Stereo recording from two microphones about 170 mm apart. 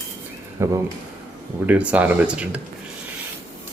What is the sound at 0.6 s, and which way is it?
Speech, 15° right (ahead or behind).